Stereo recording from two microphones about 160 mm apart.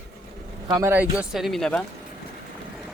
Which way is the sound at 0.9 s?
10° right (ahead or behind).